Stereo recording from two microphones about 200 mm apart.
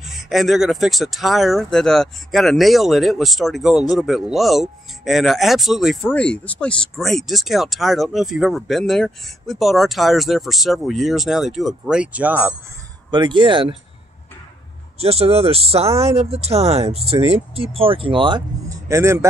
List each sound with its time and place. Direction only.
0.0 s speech: centre (ahead or behind)
13.1 s speech: 25° right (ahead or behind)
15.0 s speech: 30° right (ahead or behind); by 19.2 s 15° right (ahead or behind)